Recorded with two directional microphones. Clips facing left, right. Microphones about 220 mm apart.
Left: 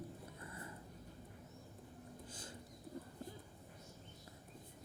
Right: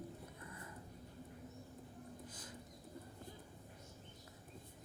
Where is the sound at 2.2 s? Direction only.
30° left (ahead or behind).